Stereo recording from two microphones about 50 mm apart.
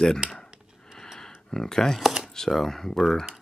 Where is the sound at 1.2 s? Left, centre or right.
Centre.